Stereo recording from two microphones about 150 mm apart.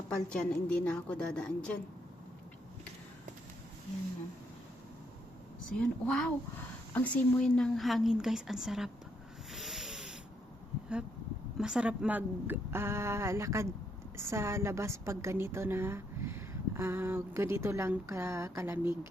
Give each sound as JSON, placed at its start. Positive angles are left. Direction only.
{"t": 0.1, "sound": "a woman's voice", "side_deg": 5}
{"t": 5.8, "sound": "a woman's voice", "side_deg": 5}
{"t": 9.5, "sound": "rub", "side_deg": 0}
{"t": 11.5, "sound": "a woman's voice", "side_deg": -5}